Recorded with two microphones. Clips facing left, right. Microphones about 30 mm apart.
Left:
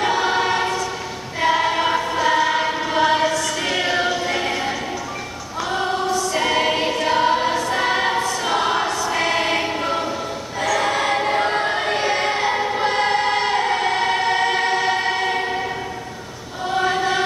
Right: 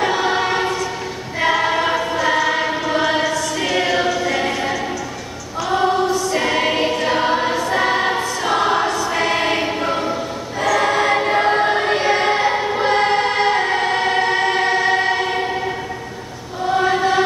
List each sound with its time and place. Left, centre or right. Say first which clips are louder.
0.0 s choir: right 1 dB; centre
4.1 s choir: right 2 dB; centre
4.5 s music: right 2 dB; centre
5.7 s choir: right 5 dB; centre
16.6 s choir: right 3 dB; centre